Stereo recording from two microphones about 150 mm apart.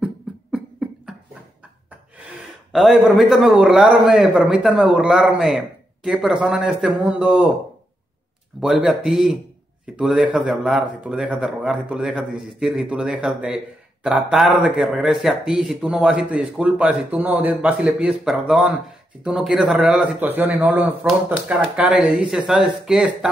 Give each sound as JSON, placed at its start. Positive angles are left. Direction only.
{"t": 0.0, "sound": "beatboxing", "side_deg": -5}
{"t": 2.7, "sound": "a man's voice", "side_deg": 0}
{"t": 8.5, "sound": "a man's voice", "side_deg": -5}